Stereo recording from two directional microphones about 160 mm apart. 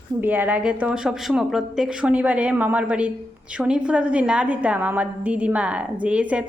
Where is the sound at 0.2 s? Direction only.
10° right (ahead or behind).